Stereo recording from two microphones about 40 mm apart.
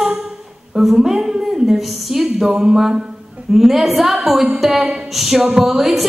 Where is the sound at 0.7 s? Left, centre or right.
Centre.